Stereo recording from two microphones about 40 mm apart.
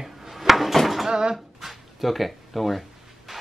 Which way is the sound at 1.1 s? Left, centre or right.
Centre.